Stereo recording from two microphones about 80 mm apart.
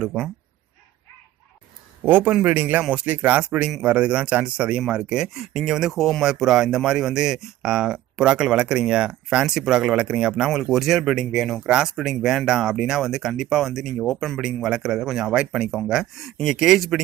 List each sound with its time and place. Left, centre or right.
0.0 s speech: centre
2.0 s speech: right; by 14.1 s centre
14.1 s speech: centre
14.4 s speech: centre